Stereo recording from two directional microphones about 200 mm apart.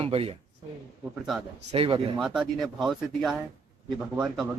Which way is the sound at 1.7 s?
30° right (ahead or behind).